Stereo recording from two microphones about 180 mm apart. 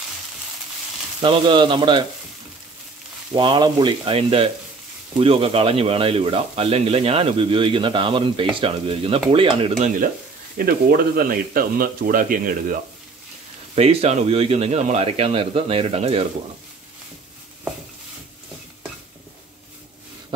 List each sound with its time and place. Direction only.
1.2 s speech: 25° right (ahead or behind)
3.3 s speech: 25° right (ahead or behind)
10.6 s speech: 55° right (ahead or behind)
13.7 s speech: 35° right (ahead or behind)